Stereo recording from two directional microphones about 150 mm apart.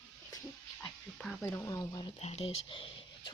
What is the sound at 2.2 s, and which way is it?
Speech, 45° left (ahead or behind).